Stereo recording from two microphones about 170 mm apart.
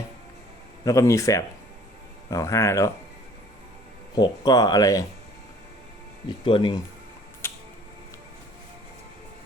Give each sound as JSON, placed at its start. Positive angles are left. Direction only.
{"t": 0.9, "sound": "speech", "side_deg": 20}
{"t": 4.1, "sound": "speech", "side_deg": 20}
{"t": 6.2, "sound": "speech", "side_deg": 30}